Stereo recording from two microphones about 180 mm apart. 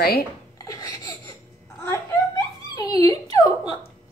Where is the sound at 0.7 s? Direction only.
20° left (ahead or behind).